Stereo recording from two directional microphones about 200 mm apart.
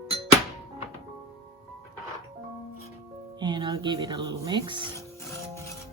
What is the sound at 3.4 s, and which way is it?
Music, 20° right (ahead or behind).